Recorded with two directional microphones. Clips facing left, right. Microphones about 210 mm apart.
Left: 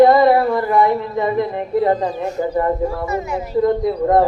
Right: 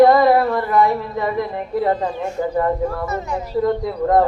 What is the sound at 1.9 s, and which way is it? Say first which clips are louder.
Speech: left 2 dB; 40° left (ahead or behind).